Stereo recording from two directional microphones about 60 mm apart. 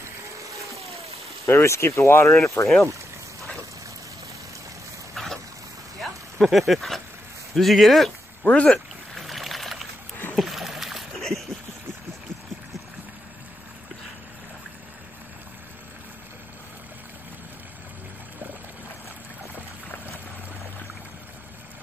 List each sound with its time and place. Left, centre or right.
1.4 s speech: left
5.1 s a sound: centre
6.4 s speech: centre
8.5 s speech: centre
8.7 s boat: centre
10.3 s splash: centre